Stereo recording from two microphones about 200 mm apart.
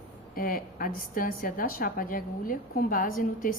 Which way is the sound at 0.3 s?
45° left (ahead or behind).